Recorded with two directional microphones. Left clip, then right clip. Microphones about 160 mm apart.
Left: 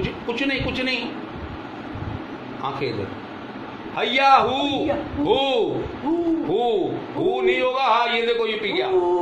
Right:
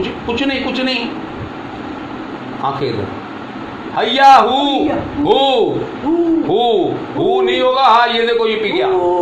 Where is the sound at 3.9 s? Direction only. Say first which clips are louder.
Right 8 dB; 25° right (ahead or behind).